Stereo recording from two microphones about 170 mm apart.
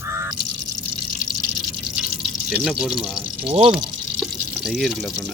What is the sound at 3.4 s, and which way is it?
Speech, 35° right (ahead or behind).